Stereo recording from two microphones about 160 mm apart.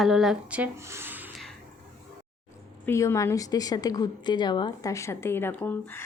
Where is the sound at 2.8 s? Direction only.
15° left (ahead or behind).